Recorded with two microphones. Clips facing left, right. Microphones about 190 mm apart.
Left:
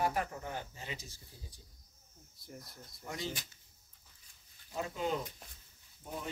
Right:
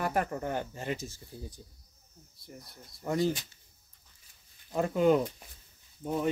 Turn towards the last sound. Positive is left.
turn(degrees=-80)